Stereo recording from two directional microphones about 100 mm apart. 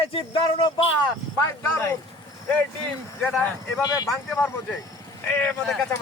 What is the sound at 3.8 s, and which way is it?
Speech, 35° left (ahead or behind).